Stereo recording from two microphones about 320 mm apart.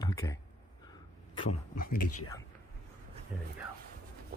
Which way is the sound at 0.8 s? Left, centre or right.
Centre.